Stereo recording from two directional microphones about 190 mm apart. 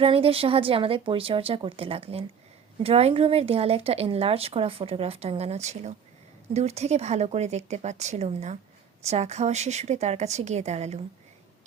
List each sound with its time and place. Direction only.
0.0 s a woman's voice: 30° right (ahead or behind)